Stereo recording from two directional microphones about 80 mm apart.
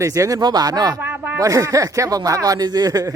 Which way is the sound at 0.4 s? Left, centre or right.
Right.